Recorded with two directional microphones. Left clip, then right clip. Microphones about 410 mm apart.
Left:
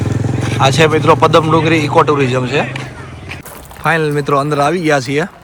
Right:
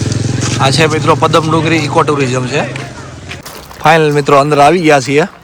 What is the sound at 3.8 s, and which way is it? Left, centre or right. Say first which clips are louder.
Speech: right 6 dB; centre.